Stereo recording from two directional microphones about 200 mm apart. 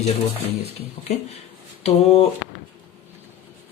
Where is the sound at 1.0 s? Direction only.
30° left (ahead or behind).